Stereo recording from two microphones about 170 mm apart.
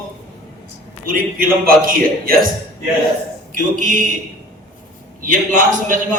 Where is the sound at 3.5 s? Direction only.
50° right (ahead or behind).